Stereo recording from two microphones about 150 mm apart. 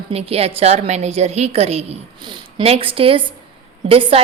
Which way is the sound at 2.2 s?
30° right (ahead or behind).